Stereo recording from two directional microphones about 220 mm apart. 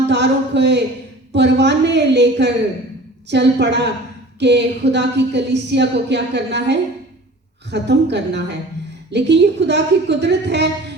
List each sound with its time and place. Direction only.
0.1 s speech: 50° right (ahead or behind)